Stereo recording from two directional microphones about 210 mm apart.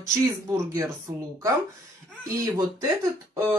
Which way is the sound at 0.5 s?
15° right (ahead or behind).